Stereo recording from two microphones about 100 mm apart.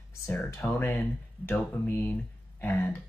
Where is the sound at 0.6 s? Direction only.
25° left (ahead or behind).